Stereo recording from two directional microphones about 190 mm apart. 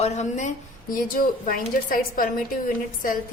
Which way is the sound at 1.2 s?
50° left (ahead or behind).